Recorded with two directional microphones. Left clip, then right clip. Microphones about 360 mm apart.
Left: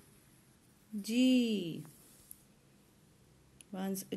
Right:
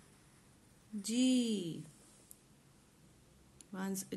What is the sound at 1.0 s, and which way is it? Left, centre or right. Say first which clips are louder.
Speech: left 3 dB; centre.